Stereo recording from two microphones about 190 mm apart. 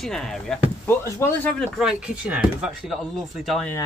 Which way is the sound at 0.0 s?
Centre (ahead or behind).